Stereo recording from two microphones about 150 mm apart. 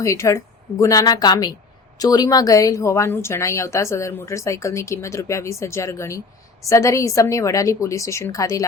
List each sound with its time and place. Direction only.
0.0 s a woman's voice: 20° left (ahead or behind)